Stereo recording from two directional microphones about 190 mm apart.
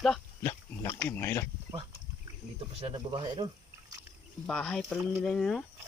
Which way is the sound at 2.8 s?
25° right (ahead or behind).